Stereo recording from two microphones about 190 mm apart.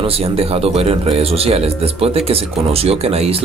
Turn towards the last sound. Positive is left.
turn(degrees=-30)  # may be behind; listen again after turning